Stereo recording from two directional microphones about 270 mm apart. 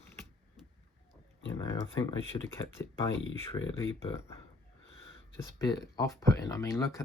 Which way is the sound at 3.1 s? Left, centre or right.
Left.